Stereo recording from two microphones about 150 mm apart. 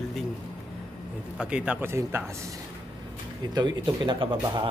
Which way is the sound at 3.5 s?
30° right (ahead or behind).